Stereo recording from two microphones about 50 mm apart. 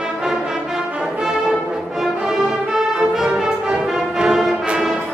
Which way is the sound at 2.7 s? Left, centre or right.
Centre.